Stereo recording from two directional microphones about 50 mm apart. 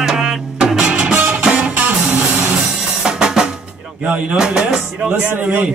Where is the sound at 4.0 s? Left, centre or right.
Right.